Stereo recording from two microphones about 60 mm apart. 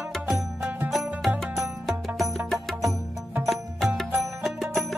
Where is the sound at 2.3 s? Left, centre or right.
Centre.